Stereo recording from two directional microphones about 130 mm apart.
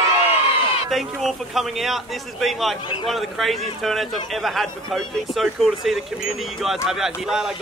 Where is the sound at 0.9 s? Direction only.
Centre (ahead or behind).